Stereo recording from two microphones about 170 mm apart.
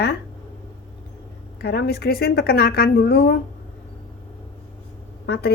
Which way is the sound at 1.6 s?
65° left (ahead or behind).